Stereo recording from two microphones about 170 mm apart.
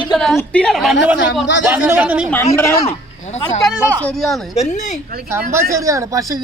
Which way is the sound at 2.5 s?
15° left (ahead or behind).